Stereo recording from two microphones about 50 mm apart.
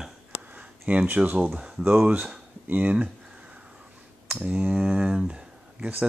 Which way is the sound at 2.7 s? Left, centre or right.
Right.